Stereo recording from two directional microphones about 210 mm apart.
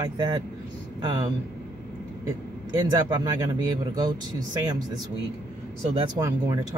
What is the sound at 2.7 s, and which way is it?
Speech, 20° right (ahead or behind).